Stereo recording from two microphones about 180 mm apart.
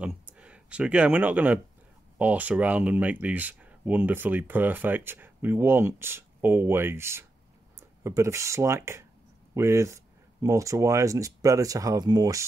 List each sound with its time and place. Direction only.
0.0 s speech: 5° right (ahead or behind)